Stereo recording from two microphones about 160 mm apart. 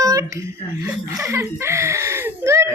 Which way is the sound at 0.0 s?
20° right (ahead or behind).